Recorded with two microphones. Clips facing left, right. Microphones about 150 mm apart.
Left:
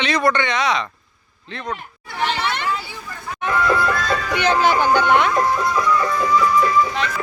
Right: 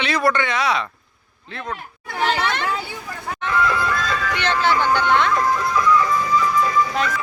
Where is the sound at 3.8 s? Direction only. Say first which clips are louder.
Left 2 dB; 50° left (ahead or behind).